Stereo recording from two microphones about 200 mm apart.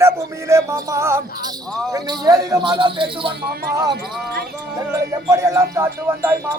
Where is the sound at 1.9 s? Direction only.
20° right (ahead or behind).